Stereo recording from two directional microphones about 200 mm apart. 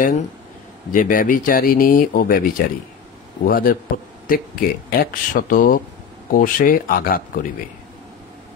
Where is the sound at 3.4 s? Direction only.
45° left (ahead or behind).